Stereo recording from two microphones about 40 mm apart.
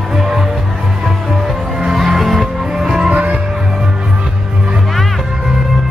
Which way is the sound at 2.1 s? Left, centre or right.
Centre.